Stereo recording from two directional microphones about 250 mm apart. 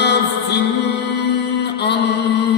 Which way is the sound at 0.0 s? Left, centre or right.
Left.